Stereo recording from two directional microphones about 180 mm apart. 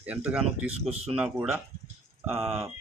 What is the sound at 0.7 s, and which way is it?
Speech, 35° right (ahead or behind).